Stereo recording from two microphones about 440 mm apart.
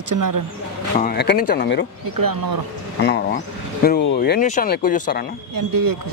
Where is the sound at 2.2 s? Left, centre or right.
Right.